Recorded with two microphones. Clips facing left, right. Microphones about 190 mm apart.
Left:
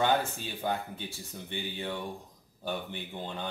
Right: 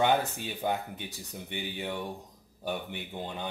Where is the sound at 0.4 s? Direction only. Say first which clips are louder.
Right 1 dB; 15° right (ahead or behind).